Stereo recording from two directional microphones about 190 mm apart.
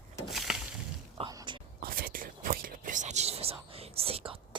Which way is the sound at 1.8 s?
50° right (ahead or behind).